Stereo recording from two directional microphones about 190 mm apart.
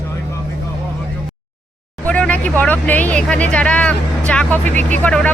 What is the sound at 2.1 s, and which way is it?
Vehicle, 5° left (ahead or behind).